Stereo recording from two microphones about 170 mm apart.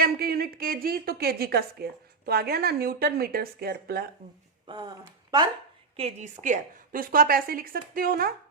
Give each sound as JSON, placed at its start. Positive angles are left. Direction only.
{"t": 0.0, "sound": "a woman's voice", "side_deg": -60}
{"t": 4.6, "sound": "speech", "side_deg": -25}
{"t": 6.0, "sound": "a woman's voice", "side_deg": -40}